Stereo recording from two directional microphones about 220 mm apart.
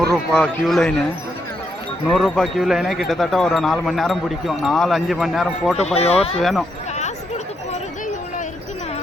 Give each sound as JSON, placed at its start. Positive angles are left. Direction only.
{"t": 0.1, "sound": "speech", "side_deg": 0}
{"t": 2.0, "sound": "speech", "side_deg": 0}
{"t": 5.7, "sound": "speech", "side_deg": 30}
{"t": 6.4, "sound": "speech", "side_deg": 0}